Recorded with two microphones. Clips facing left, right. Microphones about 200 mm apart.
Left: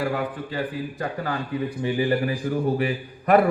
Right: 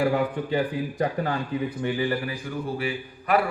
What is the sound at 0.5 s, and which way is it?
Speech, 15° right (ahead or behind).